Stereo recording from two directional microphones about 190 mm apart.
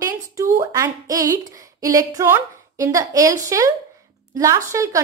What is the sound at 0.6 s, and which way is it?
A woman's voice, 15° right (ahead or behind).